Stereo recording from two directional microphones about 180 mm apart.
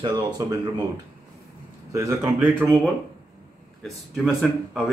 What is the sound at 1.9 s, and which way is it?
Speech, 15° right (ahead or behind).